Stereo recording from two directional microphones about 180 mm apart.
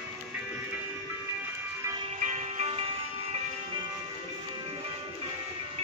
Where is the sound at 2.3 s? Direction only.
35° right (ahead or behind).